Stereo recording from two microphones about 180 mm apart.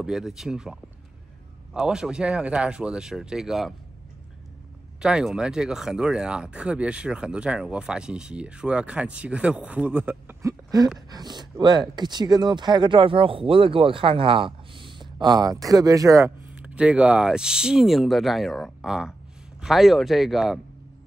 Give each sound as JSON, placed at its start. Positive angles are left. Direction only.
{"t": 0.0, "sound": "speech", "side_deg": -5}
{"t": 5.0, "sound": "speech", "side_deg": -5}